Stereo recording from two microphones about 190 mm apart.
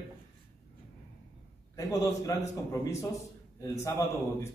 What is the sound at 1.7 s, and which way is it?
A man's voice, 15° left (ahead or behind).